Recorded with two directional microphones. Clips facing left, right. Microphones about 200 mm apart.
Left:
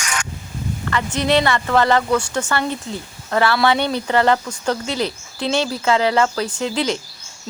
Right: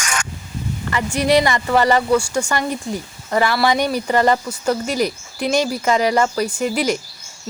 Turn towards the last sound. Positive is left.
turn(degrees=-10)  # may be behind; listen again after turning